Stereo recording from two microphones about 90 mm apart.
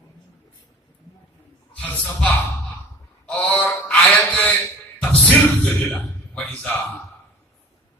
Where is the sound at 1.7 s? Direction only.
10° left (ahead or behind).